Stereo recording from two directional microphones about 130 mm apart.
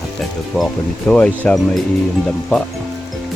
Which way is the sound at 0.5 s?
5° left (ahead or behind).